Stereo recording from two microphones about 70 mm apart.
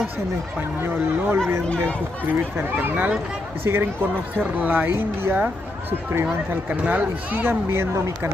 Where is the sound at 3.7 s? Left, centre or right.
Right.